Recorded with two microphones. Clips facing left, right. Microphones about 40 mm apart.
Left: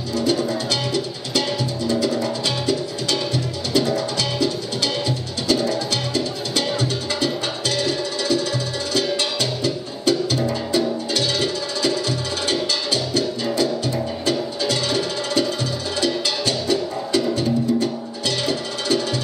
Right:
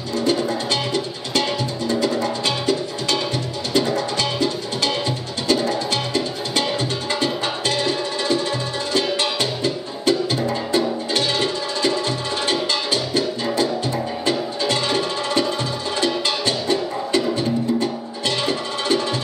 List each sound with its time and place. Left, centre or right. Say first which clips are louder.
0.2 s music: right 1 dB; right